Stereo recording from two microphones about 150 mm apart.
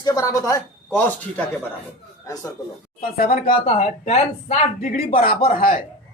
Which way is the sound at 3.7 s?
45° left (ahead or behind).